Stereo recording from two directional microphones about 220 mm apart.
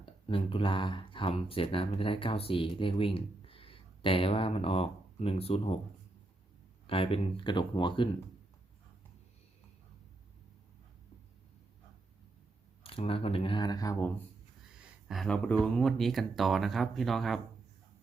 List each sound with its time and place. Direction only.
0.0 s speech: 25° left (ahead or behind)
6.8 s speech: 25° left (ahead or behind)
12.8 s speech: 25° left (ahead or behind)
15.0 s speech: centre (ahead or behind)